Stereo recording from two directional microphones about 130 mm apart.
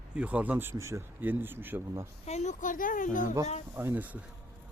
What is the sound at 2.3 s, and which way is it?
Speech, 60° left (ahead or behind).